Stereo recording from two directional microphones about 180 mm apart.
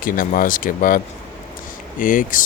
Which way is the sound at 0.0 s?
50° left (ahead or behind).